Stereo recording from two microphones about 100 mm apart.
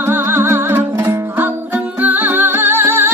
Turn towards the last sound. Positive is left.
turn(degrees=-25)  # may be behind; listen again after turning